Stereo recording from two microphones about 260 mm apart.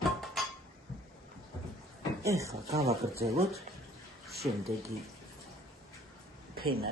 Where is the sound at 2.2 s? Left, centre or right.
Centre.